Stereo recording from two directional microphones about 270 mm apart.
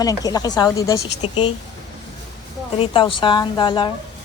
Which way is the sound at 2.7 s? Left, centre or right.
Centre.